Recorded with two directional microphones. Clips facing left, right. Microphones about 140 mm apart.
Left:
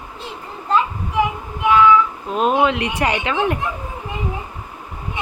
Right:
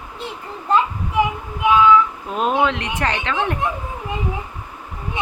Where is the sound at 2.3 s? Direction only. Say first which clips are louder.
Left 2 dB; 5° left (ahead or behind).